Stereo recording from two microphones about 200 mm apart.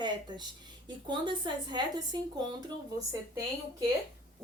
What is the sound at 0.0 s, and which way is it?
A woman's voice, 20° right (ahead or behind).